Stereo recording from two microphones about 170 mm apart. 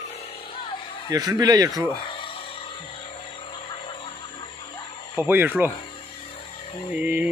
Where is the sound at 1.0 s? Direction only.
20° right (ahead or behind).